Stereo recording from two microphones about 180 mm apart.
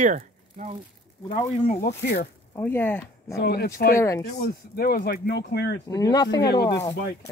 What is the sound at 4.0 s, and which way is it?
Speech, 15° left (ahead or behind).